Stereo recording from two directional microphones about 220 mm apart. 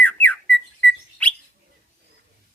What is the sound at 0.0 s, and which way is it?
Bird, 5° left (ahead or behind).